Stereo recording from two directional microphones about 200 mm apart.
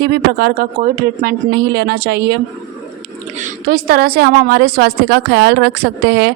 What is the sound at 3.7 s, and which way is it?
A woman's voice, 50° right (ahead or behind).